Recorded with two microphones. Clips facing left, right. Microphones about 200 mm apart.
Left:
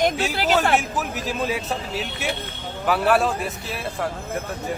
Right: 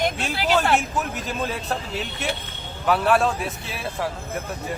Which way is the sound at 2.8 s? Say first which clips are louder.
Even; centre (ahead or behind).